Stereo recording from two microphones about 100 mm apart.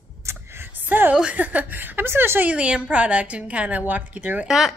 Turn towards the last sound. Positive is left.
turn(degrees=-5)  # may be behind; listen again after turning